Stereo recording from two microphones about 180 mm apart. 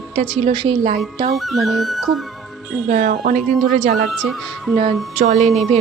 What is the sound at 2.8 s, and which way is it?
Speech, 45° right (ahead or behind).